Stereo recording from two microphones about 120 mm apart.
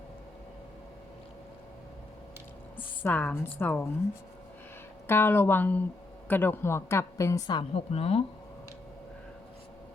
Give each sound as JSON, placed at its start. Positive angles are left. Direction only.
{"t": 3.0, "sound": "a woman's voice", "side_deg": 15}
{"t": 5.0, "sound": "a woman's voice", "side_deg": 20}
{"t": 7.9, "sound": "speech", "side_deg": 55}